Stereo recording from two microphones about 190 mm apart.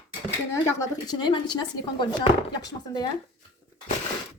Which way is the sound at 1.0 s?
20° left (ahead or behind).